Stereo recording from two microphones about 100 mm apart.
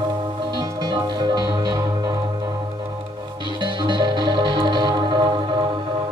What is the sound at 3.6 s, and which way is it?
Music, 50° right (ahead or behind).